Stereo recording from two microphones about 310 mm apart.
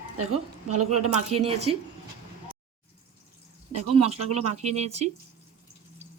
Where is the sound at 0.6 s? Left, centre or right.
Right.